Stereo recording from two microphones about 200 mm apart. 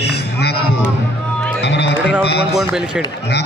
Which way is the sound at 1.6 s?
55° left (ahead or behind).